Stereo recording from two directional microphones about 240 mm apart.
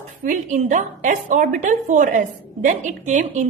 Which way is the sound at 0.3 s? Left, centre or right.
Right.